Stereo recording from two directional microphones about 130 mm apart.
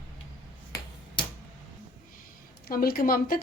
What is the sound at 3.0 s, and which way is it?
Speech, 90° left.